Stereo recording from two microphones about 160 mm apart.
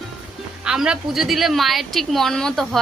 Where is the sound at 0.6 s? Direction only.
5° right (ahead or behind).